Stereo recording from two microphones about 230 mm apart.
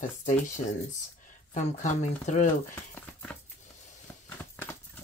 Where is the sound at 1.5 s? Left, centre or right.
Left.